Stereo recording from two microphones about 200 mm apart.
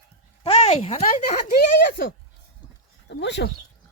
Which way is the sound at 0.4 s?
30° left (ahead or behind).